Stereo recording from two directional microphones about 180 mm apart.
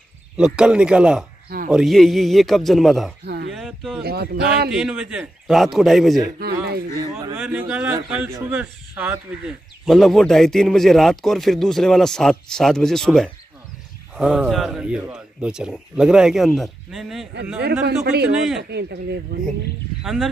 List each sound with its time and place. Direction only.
0.4 s a man's voice: 5° right (ahead or behind)
4.0 s speech: 60° right (ahead or behind)
4.6 s a man's voice: 5° right (ahead or behind)
6.4 s speech: 60° right (ahead or behind)
7.0 s speech: 20° right (ahead or behind)
7.3 s a man's voice: 10° right (ahead or behind)
17.6 s speech: 65° right (ahead or behind)
20.0 s speech: centre (ahead or behind)